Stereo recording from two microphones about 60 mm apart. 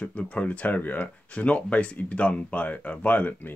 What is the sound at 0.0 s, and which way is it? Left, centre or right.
Speech, left.